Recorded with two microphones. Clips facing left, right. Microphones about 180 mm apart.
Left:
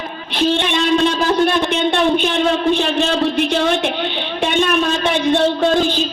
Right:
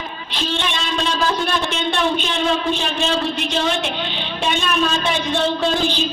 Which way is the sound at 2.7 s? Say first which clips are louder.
Left 5 dB; 60° left (ahead or behind).